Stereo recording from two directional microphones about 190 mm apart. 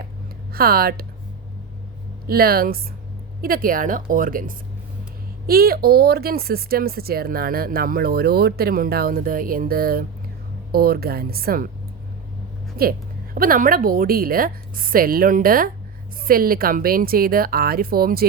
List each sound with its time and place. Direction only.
0.5 s speech: 50° right (ahead or behind)
2.2 s speech: 50° right (ahead or behind)
12.7 s speech: 50° right (ahead or behind)